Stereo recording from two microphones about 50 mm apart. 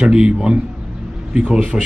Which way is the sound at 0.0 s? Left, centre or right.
Centre.